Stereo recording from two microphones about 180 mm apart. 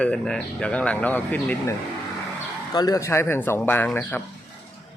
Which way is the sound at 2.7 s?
20° left (ahead or behind).